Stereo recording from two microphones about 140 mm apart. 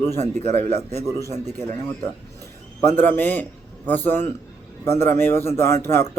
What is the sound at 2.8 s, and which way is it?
A man's voice, 15° left (ahead or behind).